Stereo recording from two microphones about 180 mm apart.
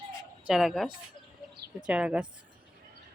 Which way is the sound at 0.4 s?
Centre (ahead or behind).